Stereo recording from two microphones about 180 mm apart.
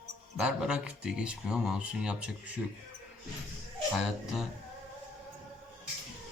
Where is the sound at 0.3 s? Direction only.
5° right (ahead or behind).